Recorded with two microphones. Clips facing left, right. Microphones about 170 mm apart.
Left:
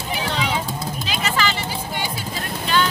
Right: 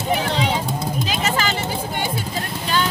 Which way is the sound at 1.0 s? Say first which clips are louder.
Left 1 dB; 45° right (ahead or behind).